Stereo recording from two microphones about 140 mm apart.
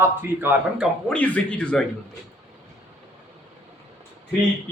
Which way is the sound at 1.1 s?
10° left (ahead or behind).